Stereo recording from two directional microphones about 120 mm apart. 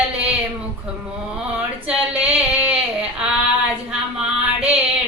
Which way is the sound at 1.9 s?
10° right (ahead or behind).